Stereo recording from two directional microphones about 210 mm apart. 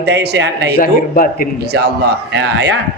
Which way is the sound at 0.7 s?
40° left (ahead or behind).